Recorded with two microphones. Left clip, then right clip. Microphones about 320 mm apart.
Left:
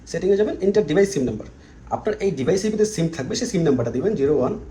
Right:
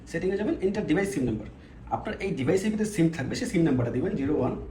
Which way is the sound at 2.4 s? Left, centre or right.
Centre.